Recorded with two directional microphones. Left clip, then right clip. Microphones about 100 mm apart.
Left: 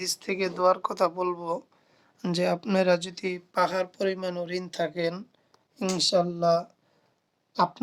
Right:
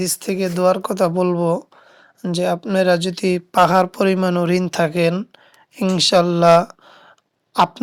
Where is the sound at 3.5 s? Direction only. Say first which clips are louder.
Right 12 dB; 65° right (ahead or behind).